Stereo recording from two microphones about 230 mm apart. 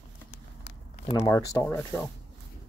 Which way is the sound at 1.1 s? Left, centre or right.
Centre.